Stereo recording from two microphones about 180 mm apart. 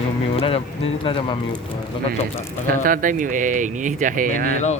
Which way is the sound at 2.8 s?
50° right (ahead or behind).